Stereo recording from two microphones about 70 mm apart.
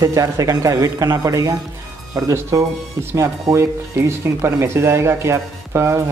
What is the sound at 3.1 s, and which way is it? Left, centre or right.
A man's voice, right.